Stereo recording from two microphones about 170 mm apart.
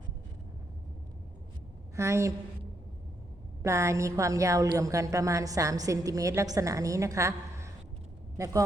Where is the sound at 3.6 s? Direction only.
15° right (ahead or behind).